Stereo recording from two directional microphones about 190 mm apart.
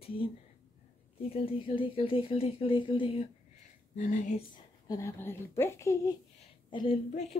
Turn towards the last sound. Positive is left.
turn(degrees=35)  # may be behind; listen again after turning